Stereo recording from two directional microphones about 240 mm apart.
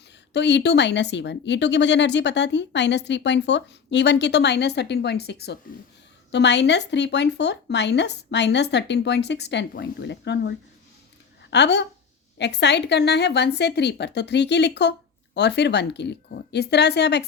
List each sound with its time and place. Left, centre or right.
0.3 s speech: left
11.5 s speech: left